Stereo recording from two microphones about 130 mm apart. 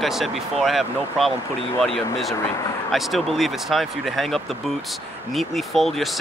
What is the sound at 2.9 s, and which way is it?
Speech, centre (ahead or behind).